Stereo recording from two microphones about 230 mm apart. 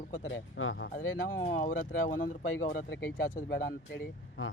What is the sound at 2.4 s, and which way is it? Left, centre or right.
Speech, left.